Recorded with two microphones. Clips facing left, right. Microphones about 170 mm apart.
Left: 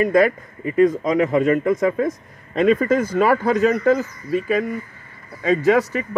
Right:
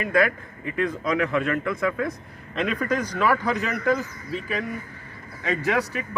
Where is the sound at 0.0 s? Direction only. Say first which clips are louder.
Left 6 dB; 40° left (ahead or behind).